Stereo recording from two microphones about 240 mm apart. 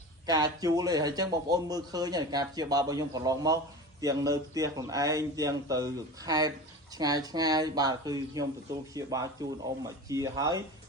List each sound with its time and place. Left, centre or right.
0.3 s speech: centre